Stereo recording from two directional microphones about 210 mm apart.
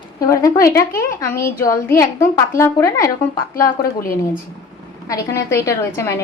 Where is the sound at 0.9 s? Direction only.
15° left (ahead or behind).